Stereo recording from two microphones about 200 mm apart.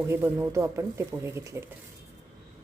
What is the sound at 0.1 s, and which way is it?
Speech, 15° right (ahead or behind).